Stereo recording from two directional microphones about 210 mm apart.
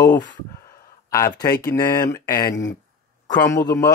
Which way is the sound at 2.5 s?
60° left (ahead or behind).